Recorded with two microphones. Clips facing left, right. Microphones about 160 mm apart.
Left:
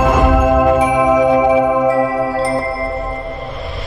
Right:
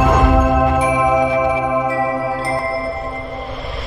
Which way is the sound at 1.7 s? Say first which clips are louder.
Left 4 dB; centre (ahead or behind).